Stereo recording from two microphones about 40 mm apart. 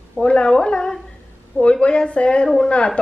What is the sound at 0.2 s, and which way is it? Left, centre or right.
A woman's voice, left.